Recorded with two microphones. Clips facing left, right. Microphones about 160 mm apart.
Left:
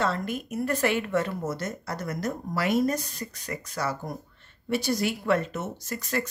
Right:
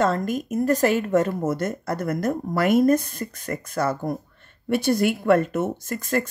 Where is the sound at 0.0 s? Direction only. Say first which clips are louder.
Right 6 dB; 45° right (ahead or behind).